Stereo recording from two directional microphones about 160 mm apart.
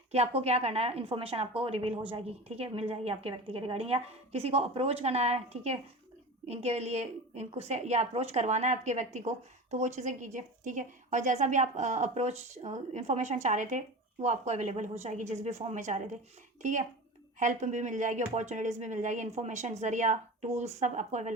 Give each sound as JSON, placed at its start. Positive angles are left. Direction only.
{"t": 0.1, "sound": "a woman's voice", "side_deg": -40}
{"t": 17.4, "sound": "a woman's voice", "side_deg": -50}